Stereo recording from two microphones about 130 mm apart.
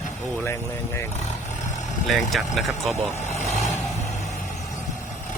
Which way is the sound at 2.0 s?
Centre (ahead or behind).